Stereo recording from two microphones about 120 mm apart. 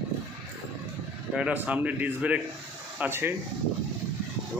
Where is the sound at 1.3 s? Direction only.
10° right (ahead or behind).